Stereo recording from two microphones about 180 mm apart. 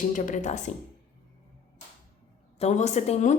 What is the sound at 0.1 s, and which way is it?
Speech, 45° left (ahead or behind).